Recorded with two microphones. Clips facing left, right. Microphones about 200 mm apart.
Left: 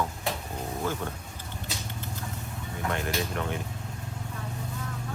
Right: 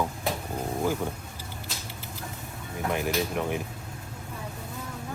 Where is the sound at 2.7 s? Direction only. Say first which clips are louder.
Right 3 dB; 5° right (ahead or behind).